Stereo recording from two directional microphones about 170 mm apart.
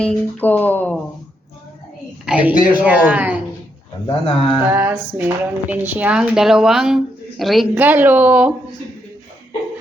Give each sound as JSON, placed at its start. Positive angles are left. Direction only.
{"t": 0.0, "sound": "speech", "side_deg": 5}
{"t": 2.2, "sound": "speech", "side_deg": -5}
{"t": 4.0, "sound": "a man's voice", "side_deg": 35}
{"t": 4.5, "sound": "speech", "side_deg": -10}